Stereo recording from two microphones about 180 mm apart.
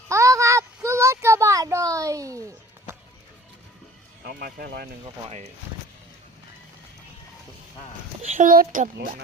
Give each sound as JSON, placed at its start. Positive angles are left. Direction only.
{"t": 0.1, "sound": "a sound", "side_deg": -15}
{"t": 4.2, "sound": "speech", "side_deg": -60}
{"t": 8.2, "sound": "speech", "side_deg": -45}